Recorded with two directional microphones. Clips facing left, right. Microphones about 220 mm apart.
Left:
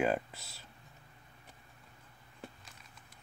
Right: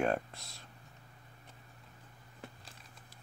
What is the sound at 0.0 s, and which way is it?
Speech, 5° left (ahead or behind).